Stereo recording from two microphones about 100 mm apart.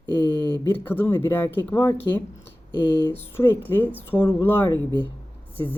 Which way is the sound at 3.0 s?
25° left (ahead or behind).